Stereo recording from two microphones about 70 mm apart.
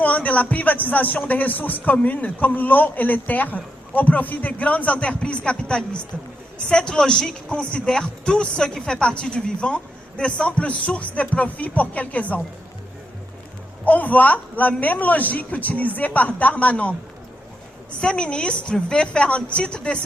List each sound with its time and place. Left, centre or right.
0.0 s speech: left
13.8 s speech: left
18.0 s speech: centre